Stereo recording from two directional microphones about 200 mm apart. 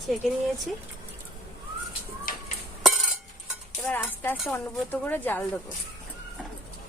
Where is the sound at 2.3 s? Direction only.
45° left (ahead or behind).